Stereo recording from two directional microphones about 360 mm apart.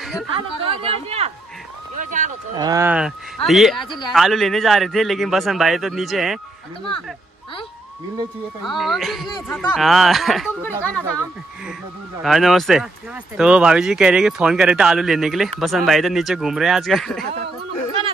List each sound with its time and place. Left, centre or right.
0.0 s chatter: centre
0.3 s speech: centre
2.6 s speech: centre
8.6 s speech: centre
12.2 s speech: centre